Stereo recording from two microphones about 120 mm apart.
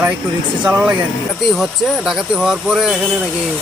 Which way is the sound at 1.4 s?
Centre (ahead or behind).